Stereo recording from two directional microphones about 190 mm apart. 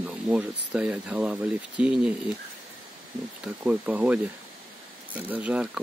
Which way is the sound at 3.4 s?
5° right (ahead or behind).